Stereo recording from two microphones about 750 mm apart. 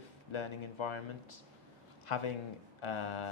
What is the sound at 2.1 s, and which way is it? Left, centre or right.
A man's voice, left.